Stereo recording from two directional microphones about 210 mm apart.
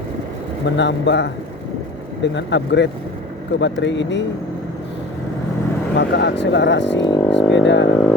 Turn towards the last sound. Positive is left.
turn(degrees=60)  # may be behind; listen again after turning